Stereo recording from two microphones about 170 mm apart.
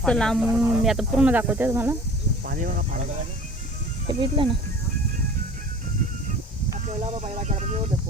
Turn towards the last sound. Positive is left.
turn(degrees=-40)  # may be behind; listen again after turning